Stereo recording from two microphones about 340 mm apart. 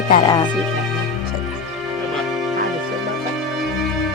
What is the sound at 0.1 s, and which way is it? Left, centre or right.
Speech, centre.